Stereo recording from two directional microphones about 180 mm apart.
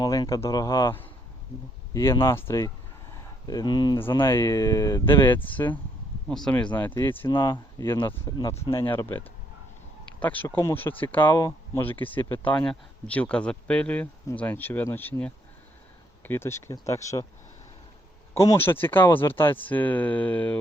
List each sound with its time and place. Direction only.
0.0 s speech: 20° left (ahead or behind)
7.3 s speech: 25° left (ahead or behind)
8.4 s speech: 25° left (ahead or behind)
8.9 s speech: 10° left (ahead or behind)
18.3 s speech: 15° left (ahead or behind)